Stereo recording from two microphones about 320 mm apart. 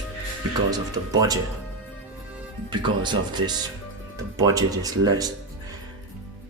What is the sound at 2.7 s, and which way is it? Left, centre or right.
Speech, centre.